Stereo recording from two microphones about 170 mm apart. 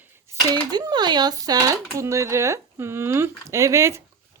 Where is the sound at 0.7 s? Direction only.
25° right (ahead or behind).